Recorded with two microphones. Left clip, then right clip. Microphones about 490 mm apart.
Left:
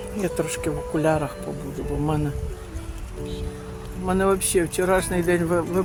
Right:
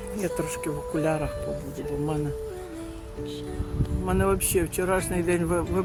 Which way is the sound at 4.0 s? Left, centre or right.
Right.